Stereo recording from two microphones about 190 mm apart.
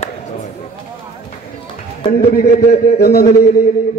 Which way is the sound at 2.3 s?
50° left (ahead or behind).